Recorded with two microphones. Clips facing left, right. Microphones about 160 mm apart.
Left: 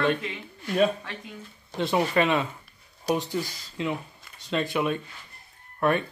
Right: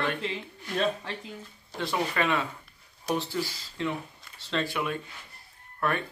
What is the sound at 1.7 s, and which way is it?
Speech, 20° left (ahead or behind).